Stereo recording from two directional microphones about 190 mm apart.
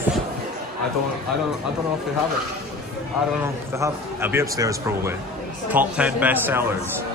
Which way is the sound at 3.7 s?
15° right (ahead or behind).